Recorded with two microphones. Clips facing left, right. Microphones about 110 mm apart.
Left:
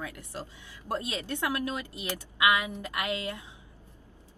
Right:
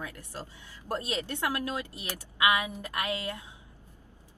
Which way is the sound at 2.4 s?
20° right (ahead or behind).